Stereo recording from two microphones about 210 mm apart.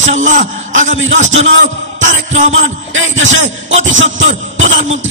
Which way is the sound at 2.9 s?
65° right (ahead or behind).